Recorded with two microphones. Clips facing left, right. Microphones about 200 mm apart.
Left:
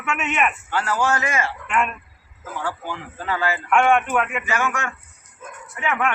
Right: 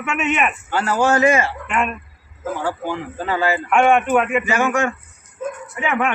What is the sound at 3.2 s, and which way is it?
A man's voice, 25° right (ahead or behind).